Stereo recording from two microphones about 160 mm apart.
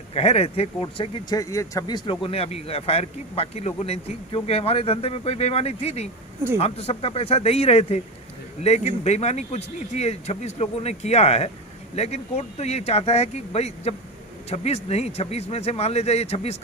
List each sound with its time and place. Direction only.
0.1 s a man's voice: 40° left (ahead or behind)
1.4 s a man's voice: 20° left (ahead or behind)
2.0 s a man's voice: 35° left (ahead or behind)